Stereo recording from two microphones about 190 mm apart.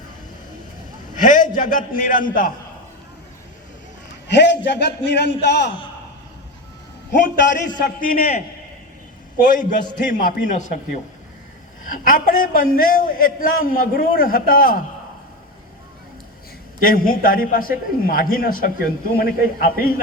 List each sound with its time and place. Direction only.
1.2 s a man's voice: 45° left (ahead or behind)
4.3 s a man's voice: 65° left (ahead or behind)
7.1 s a man's voice: 45° left (ahead or behind)
9.4 s a man's voice: 45° left (ahead or behind)
11.9 s a man's voice: 45° left (ahead or behind)
16.8 s a man's voice: 50° left (ahead or behind)